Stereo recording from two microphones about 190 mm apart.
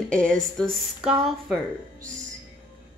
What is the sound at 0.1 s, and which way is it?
A woman's voice, 5° left (ahead or behind).